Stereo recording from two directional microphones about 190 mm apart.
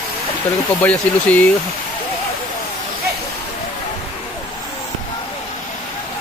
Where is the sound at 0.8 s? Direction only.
10° left (ahead or behind).